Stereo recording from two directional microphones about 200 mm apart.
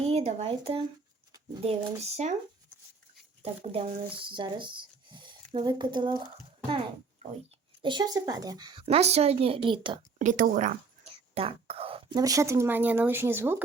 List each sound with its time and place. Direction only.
0.0 s speech: 30° right (ahead or behind)
3.4 s speech: 30° right (ahead or behind)
7.8 s speech: 20° right (ahead or behind)
10.2 s speech: 40° right (ahead or behind)
11.0 s speech: 30° right (ahead or behind); by 13.6 s 10° right (ahead or behind)